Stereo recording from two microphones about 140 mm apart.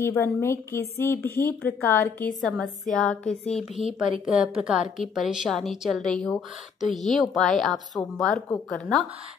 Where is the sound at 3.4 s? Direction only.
50° left (ahead or behind).